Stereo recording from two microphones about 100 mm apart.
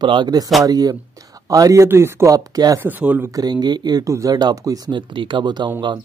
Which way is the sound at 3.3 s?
45° right (ahead or behind).